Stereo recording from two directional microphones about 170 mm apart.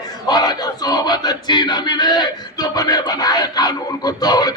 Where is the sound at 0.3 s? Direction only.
25° left (ahead or behind).